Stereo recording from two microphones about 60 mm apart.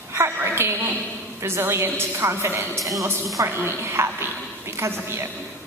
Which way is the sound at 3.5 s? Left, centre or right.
Right.